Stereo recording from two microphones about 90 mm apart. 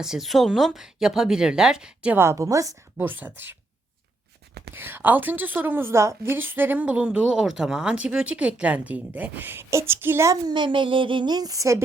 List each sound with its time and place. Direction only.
0.0 s speech: 5° right (ahead or behind)
2.1 s a woman's voice: 30° right (ahead or behind)
3.0 s a woman's voice: 20° right (ahead or behind)
4.7 s a woman's voice: 25° right (ahead or behind)
10.4 s speech: 60° right (ahead or behind); by 11.8 s 35° right (ahead or behind)